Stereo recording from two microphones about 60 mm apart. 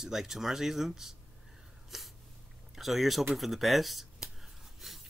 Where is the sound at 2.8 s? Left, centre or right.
Centre.